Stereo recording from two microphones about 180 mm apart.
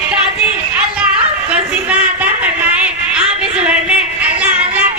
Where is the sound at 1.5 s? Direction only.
5° right (ahead or behind).